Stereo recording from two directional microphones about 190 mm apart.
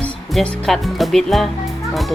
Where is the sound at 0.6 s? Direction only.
Centre (ahead or behind).